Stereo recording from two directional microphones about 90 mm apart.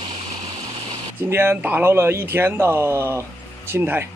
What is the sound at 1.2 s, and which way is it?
A man's voice, 25° right (ahead or behind).